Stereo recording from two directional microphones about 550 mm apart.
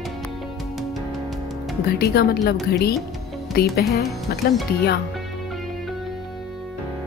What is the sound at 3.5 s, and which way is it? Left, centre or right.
Speech, centre.